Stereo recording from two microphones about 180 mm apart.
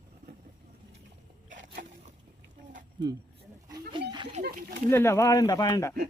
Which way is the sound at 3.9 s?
25° right (ahead or behind).